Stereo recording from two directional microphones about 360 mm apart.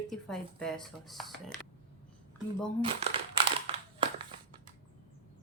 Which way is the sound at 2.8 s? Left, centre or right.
Centre.